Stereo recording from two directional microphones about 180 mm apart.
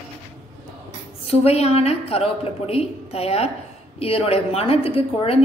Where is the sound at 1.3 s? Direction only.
35° left (ahead or behind).